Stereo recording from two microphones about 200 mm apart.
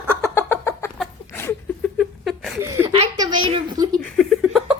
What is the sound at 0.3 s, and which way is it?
Bird, 10° left (ahead or behind).